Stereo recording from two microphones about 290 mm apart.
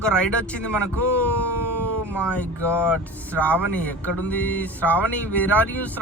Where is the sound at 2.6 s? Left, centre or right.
Centre.